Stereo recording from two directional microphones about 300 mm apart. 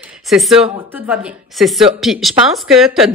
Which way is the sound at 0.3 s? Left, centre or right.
Centre.